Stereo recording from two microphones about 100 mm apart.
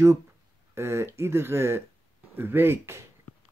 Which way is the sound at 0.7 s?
25° right (ahead or behind).